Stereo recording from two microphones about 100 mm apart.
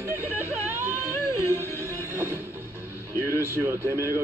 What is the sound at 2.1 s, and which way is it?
Music, 20° right (ahead or behind).